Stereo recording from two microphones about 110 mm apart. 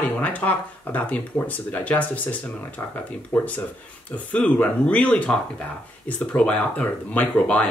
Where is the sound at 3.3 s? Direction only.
15° left (ahead or behind).